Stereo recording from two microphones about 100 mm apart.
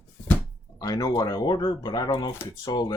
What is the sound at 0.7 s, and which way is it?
Speech, 40° left (ahead or behind).